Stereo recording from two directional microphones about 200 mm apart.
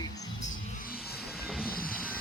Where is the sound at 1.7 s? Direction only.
45° left (ahead or behind).